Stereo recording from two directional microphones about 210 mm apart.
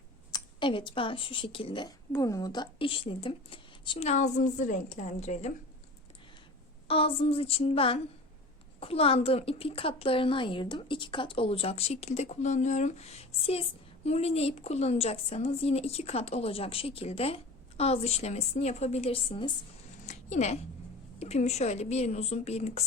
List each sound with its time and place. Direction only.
0.3 s a woman's voice: 20° left (ahead or behind)
6.8 s a woman's voice: 25° left (ahead or behind)
20.1 s a sound: 30° left (ahead or behind)
21.2 s a woman's voice: 30° left (ahead or behind)